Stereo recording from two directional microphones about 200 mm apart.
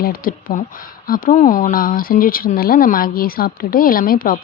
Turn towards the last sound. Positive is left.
turn(degrees=45)  # may be behind; listen again after turning